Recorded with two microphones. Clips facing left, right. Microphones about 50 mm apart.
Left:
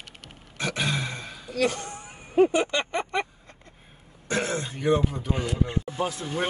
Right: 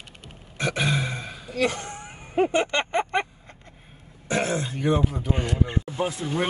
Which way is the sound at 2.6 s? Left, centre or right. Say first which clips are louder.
Right 2 dB; right.